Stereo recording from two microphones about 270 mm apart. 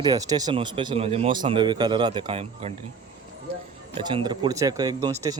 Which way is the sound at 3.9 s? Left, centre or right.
Centre.